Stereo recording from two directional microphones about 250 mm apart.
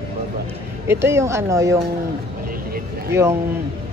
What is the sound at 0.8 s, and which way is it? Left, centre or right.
Speech, centre.